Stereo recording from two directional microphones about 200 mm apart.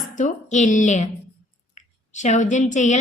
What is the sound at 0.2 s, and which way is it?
Speech, 40° left (ahead or behind).